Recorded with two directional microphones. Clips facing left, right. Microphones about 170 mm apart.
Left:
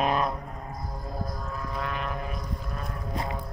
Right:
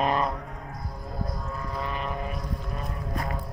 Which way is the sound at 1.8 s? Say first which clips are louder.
Right 1 dB; centre (ahead or behind).